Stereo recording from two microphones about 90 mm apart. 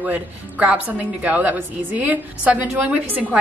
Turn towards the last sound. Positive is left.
turn(degrees=-20)  # may be behind; listen again after turning